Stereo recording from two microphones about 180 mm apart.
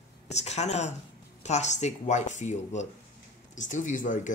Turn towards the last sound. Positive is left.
turn(degrees=45)  # may be behind; listen again after turning